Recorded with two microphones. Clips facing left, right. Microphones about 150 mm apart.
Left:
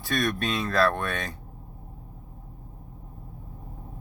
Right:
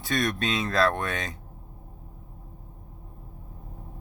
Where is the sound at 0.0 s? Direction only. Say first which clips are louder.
Even; 20° right (ahead or behind).